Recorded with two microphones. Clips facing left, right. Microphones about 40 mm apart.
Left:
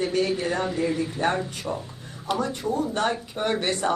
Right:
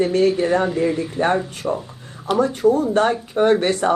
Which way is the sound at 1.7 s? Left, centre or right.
Right.